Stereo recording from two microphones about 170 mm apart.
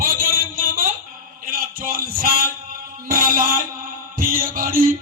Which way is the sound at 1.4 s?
55° right (ahead or behind).